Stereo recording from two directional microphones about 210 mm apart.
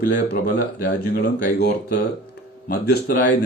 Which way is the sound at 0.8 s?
45° left (ahead or behind).